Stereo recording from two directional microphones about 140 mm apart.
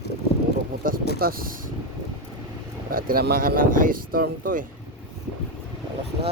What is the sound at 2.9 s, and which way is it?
Speech, 90° right.